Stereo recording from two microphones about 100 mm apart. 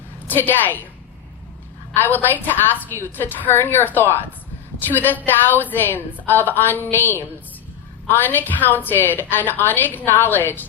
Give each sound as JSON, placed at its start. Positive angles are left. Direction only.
{"t": 0.3, "sound": "a woman's voice", "side_deg": 20}
{"t": 1.9, "sound": "a woman's voice", "side_deg": 20}